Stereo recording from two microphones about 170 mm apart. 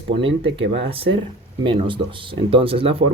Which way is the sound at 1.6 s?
30° right (ahead or behind).